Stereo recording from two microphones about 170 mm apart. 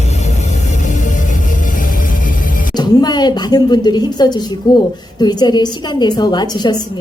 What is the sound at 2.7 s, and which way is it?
A woman's voice, 25° left (ahead or behind).